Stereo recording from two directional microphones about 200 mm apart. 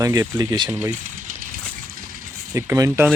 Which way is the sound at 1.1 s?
40° right (ahead or behind).